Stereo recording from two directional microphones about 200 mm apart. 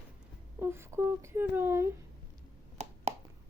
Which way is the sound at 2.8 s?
35° right (ahead or behind).